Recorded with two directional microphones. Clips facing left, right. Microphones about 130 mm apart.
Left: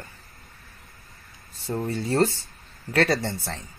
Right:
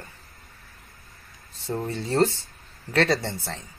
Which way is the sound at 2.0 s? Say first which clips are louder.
Right 1 dB; 20° right (ahead or behind).